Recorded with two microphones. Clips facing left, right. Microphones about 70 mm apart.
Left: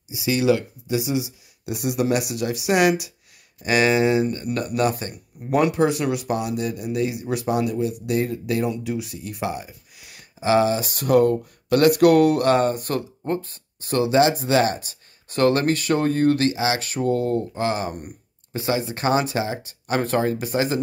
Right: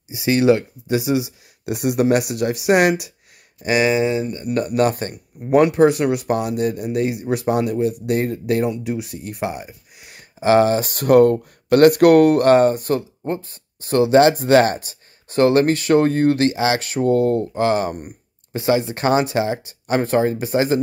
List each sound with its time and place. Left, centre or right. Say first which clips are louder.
0.1 s speech: right 4 dB; right
3.6 s speech: right 2 dB; centre
3.9 s speech: even; centre
4.3 s speech: right 1 dB; centre
4.6 s speech: right 6 dB; right
8.6 s speech: right 3 dB; right
9.5 s speech: even; right
14.2 s speech: right 5 dB; right
14.8 s speech: right 1 dB; right
20.0 s speech: right 3 dB; right